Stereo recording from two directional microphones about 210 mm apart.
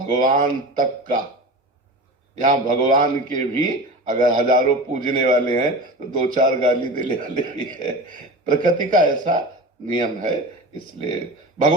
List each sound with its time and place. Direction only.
0.0 s a man's voice: 40° right (ahead or behind)
2.4 s a man's voice: 40° right (ahead or behind)